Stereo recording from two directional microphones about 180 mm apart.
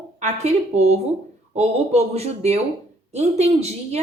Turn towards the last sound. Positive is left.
turn(degrees=-35)  # may be behind; listen again after turning